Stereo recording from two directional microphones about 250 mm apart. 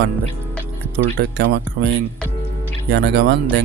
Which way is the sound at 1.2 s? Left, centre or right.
Right.